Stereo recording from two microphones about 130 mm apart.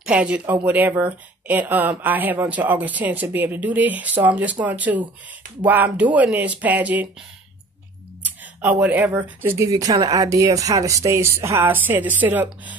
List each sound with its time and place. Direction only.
0.0 s speech: 10° right (ahead or behind)
8.5 s speech: 10° right (ahead or behind)